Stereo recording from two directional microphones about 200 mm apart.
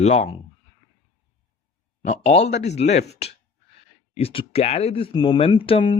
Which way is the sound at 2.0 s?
35° left (ahead or behind).